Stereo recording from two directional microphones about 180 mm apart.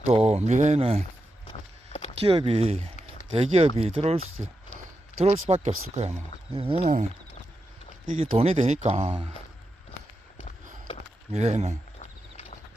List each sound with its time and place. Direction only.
0.0 s speech: 35° right (ahead or behind)
1.5 s a sound: 35° left (ahead or behind)
2.1 s speech: 30° right (ahead or behind)
8.0 s speech: 35° right (ahead or behind)
11.3 s speech: 40° right (ahead or behind)
11.9 s a sound: 35° left (ahead or behind)